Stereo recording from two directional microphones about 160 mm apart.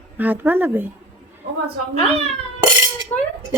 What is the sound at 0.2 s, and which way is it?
Speech, 10° right (ahead or behind).